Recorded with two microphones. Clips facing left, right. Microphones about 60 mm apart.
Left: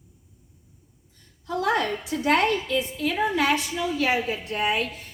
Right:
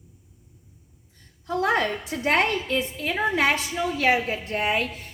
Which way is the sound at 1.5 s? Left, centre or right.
Right.